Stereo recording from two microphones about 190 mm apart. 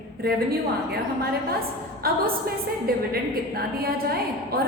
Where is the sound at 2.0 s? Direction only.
50° right (ahead or behind).